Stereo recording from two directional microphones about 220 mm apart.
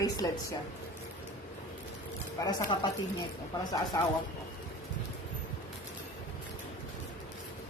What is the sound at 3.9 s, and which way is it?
Speech, 15° left (ahead or behind).